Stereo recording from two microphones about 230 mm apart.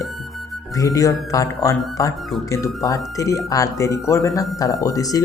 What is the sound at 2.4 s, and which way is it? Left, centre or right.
Speech, centre.